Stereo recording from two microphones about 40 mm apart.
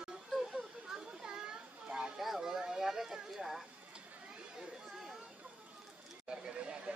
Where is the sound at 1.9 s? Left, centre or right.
Right.